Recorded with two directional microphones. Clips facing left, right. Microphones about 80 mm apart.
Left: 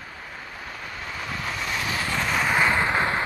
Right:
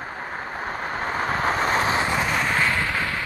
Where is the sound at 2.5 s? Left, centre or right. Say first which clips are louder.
Left 2 dB; left.